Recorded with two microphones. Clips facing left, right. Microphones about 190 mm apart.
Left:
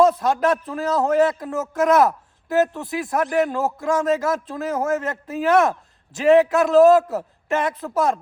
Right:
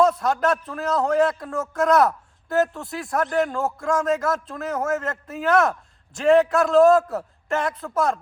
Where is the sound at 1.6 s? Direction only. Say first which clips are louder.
Left 2 dB; 5° left (ahead or behind).